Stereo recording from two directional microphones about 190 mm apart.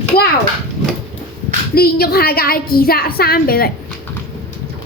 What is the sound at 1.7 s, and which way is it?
A woman's voice, 55° left (ahead or behind).